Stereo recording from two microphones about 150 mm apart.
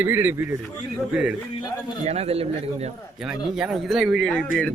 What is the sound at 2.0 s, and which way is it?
Speech, 45° right (ahead or behind).